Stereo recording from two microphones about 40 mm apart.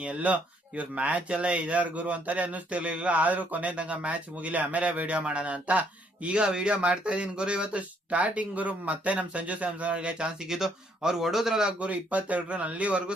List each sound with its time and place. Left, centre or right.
0.0 s speech: right
10.4 s speech: centre
11.8 s speech: right